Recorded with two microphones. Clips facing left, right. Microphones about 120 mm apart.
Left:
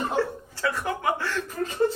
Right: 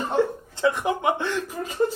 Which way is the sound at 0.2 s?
20° right (ahead or behind).